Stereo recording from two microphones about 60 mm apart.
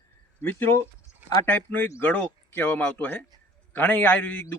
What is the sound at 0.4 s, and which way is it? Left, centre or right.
A man's voice, left.